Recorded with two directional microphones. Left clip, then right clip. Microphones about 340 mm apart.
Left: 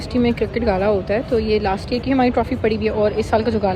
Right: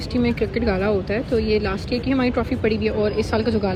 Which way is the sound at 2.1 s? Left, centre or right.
Left.